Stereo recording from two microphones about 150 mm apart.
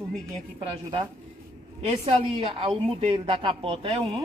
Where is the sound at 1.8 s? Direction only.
45° right (ahead or behind).